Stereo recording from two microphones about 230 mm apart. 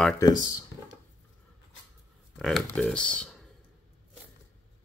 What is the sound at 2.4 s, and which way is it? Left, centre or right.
Speech, centre.